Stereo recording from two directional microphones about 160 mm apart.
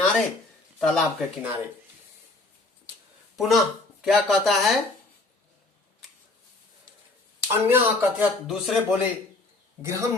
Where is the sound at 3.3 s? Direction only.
Centre (ahead or behind).